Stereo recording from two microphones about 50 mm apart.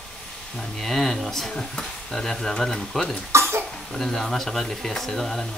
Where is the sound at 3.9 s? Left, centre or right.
Centre.